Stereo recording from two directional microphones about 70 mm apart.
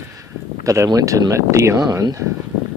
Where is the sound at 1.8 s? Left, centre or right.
Right.